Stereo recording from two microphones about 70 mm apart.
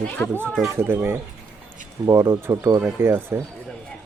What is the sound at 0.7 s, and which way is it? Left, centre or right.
Speech, right.